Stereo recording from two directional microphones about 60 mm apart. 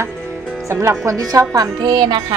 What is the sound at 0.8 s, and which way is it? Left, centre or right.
Speech, right.